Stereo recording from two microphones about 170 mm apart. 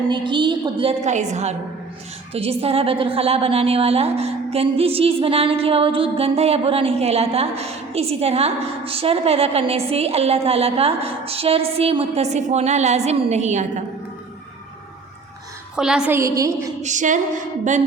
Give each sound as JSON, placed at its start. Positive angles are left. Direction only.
{"t": 0.1, "sound": "a woman's voice", "side_deg": -30}
{"t": 15.7, "sound": "a woman's voice", "side_deg": -5}
{"t": 16.8, "sound": "female singing", "side_deg": -45}